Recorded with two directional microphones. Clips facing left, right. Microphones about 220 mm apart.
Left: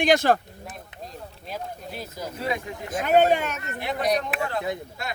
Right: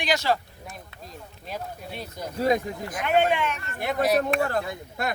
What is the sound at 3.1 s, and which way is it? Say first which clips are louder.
Speech: left 3 dB; 40° left (ahead or behind).